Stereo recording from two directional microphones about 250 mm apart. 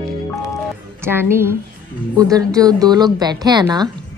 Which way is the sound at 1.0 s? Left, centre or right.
Centre.